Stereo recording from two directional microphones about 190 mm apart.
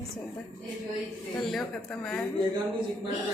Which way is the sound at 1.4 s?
Centre (ahead or behind).